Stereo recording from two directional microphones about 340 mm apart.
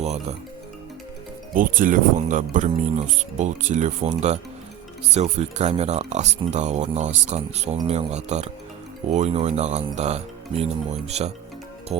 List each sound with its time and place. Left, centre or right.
0.0 s speech: centre
1.5 s speech: right
11.9 s music: centre